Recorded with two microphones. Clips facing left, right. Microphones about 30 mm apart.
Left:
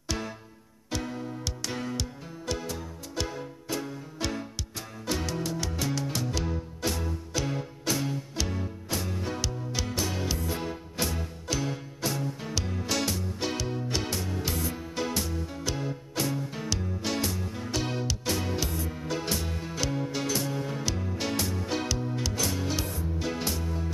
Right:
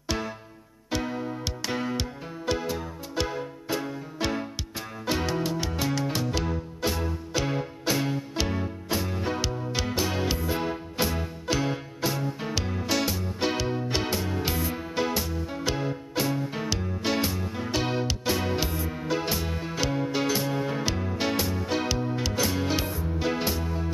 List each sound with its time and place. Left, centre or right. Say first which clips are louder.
0.8 s music: right 4 dB; centre